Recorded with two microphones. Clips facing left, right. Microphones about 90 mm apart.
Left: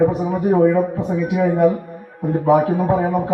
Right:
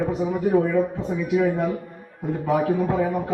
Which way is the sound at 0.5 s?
35° left (ahead or behind).